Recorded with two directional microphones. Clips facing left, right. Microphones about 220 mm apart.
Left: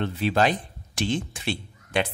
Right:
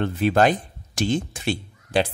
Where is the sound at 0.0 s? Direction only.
50° right (ahead or behind).